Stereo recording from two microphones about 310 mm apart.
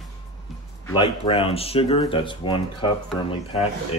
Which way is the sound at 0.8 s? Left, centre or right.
Centre.